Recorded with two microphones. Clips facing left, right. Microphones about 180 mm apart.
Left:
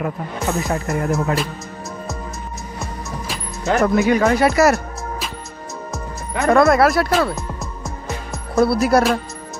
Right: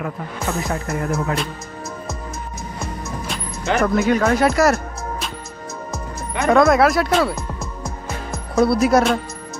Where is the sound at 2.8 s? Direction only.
Centre (ahead or behind).